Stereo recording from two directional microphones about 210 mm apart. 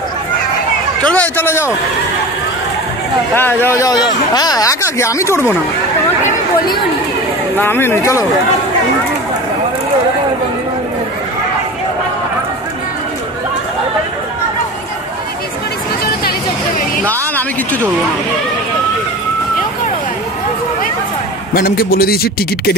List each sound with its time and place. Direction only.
1.1 s speech: 10° left (ahead or behind)
3.3 s speech: 10° left (ahead or behind)
7.5 s speech: 10° left (ahead or behind)
17.0 s a sound: 10° left (ahead or behind)
21.5 s a man's voice: 45° left (ahead or behind)